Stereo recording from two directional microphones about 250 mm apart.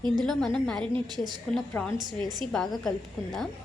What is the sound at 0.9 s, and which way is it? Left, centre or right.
Speech, centre.